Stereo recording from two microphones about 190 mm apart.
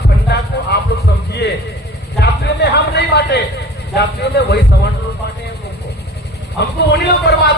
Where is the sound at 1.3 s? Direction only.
60° left (ahead or behind).